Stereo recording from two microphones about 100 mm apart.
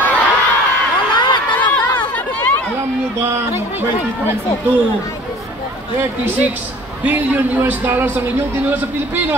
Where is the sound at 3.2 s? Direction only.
25° right (ahead or behind).